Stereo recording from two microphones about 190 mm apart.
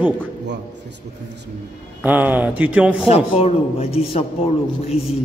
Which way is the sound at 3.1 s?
30° left (ahead or behind).